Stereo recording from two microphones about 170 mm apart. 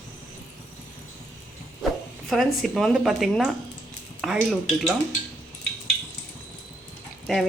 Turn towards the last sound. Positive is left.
turn(degrees=0)  # may be behind; listen again after turning